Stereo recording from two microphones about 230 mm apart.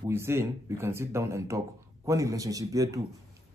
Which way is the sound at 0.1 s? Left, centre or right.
Centre.